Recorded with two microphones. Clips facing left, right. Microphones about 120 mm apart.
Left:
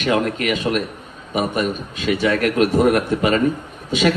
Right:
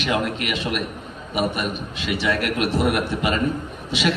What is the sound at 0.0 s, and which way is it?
Speech, 40° left (ahead or behind).